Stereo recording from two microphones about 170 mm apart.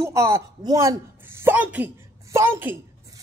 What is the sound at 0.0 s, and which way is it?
A woman's voice, 15° right (ahead or behind).